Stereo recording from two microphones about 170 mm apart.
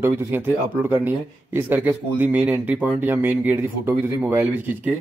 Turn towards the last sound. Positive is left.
turn(degrees=-10)  # may be behind; listen again after turning